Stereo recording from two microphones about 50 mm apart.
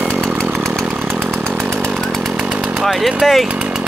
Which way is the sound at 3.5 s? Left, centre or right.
Right.